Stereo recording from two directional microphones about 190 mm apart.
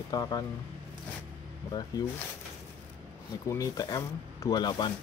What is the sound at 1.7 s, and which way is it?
Speech, 20° left (ahead or behind).